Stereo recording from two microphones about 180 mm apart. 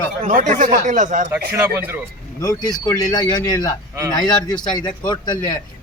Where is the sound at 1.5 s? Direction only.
15° right (ahead or behind).